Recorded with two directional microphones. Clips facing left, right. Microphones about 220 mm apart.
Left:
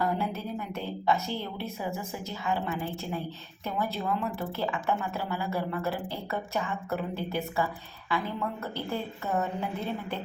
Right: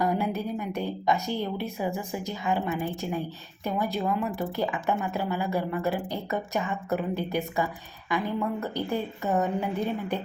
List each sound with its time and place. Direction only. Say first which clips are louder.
0.0 s a woman's voice: right 3 dB; 15° right (ahead or behind)